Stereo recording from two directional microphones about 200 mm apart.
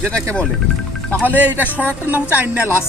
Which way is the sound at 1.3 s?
10° right (ahead or behind).